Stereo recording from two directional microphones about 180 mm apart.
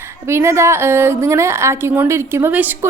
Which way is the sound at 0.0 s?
15° right (ahead or behind).